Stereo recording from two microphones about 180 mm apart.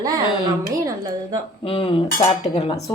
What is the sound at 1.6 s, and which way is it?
A woman's voice, 30° left (ahead or behind).